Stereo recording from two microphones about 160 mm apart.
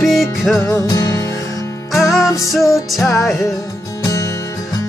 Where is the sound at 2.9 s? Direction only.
Centre (ahead or behind).